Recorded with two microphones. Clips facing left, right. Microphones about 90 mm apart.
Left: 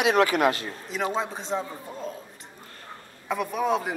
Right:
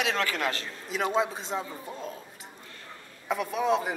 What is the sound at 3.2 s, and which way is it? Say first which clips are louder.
Speech: left 1 dB; centre (ahead or behind).